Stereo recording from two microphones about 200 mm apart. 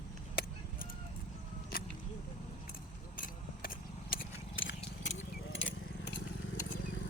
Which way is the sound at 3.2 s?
45° left (ahead or behind).